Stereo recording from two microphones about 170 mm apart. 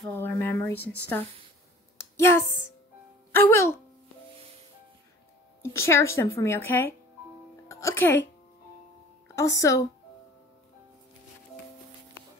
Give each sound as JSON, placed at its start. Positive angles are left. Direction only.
{"t": 0.1, "sound": "speech", "side_deg": 15}
{"t": 2.0, "sound": "a sound", "side_deg": 15}
{"t": 3.3, "sound": "speech", "side_deg": 15}
{"t": 5.6, "sound": "speech", "side_deg": 15}
{"t": 9.6, "sound": "speech", "side_deg": 20}